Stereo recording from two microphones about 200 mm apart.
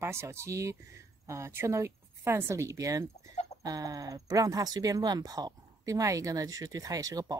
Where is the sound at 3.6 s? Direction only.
20° right (ahead or behind).